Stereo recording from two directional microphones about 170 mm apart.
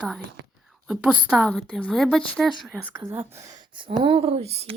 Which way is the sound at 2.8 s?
10° right (ahead or behind).